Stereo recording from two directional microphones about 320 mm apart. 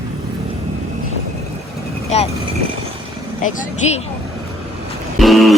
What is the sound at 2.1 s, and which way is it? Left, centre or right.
Speech, left.